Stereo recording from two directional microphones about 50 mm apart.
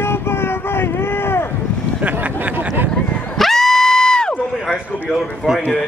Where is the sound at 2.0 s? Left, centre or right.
Right.